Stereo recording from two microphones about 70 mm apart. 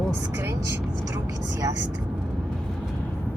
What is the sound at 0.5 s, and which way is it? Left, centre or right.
Vehicle, right.